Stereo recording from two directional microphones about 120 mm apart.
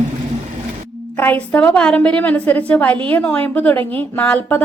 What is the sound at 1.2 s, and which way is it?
A woman's voice, 15° left (ahead or behind).